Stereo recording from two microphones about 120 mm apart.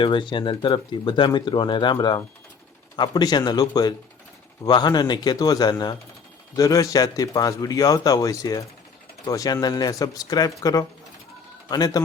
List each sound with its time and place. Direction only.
0.0 s speech: 40° left (ahead or behind)